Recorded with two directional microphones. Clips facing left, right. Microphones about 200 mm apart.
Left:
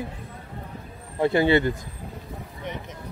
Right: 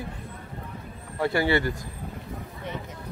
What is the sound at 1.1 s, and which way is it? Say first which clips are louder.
Speech: left 4 dB; 20° left (ahead or behind).